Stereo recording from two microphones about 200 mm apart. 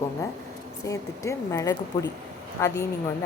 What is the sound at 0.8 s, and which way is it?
A woman's voice, 15° left (ahead or behind).